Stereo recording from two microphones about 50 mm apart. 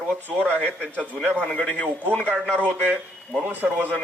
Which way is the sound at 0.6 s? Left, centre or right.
Left.